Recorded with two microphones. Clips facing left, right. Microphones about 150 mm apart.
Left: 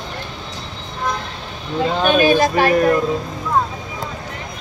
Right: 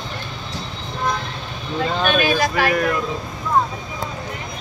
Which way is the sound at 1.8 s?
15° left (ahead or behind).